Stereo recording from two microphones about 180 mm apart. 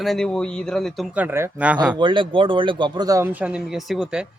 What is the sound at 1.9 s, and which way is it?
Speech, 25° right (ahead or behind).